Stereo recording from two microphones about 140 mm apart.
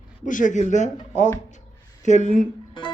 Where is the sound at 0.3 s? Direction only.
65° left (ahead or behind).